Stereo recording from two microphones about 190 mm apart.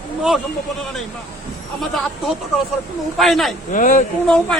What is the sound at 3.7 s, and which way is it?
Speech, 45° left (ahead or behind).